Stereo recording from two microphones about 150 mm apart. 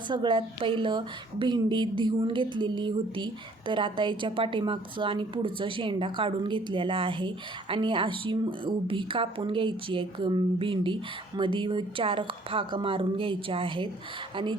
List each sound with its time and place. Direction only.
0.1 s a woman's voice: 35° right (ahead or behind)